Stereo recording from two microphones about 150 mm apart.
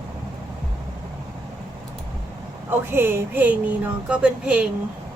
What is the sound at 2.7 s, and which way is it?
A woman's voice, 15° right (ahead or behind).